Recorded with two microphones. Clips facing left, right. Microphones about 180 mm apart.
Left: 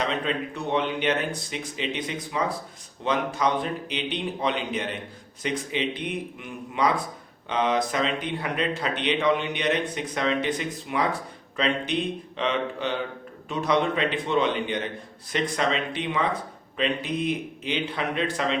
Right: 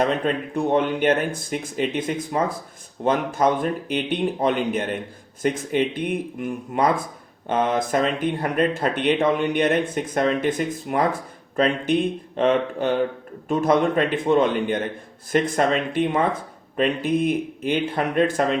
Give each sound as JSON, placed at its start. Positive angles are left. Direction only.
{"t": 0.0, "sound": "speech", "side_deg": -50}